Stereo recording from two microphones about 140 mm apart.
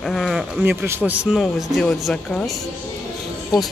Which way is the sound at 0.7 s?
15° right (ahead or behind).